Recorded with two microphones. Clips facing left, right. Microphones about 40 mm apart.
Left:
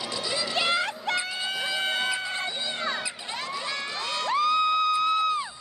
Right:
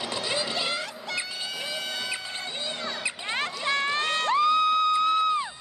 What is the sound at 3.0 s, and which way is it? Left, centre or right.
Run, right.